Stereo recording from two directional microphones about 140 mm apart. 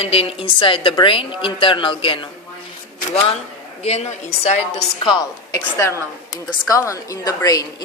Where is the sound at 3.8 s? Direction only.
50° left (ahead or behind).